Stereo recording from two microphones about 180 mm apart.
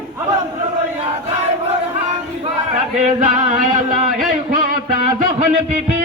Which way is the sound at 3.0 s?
40° right (ahead or behind).